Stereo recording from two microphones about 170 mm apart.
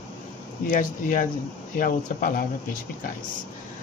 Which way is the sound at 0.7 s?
50° left (ahead or behind).